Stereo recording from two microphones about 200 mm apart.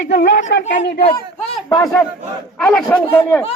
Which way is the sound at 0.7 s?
60° left (ahead or behind).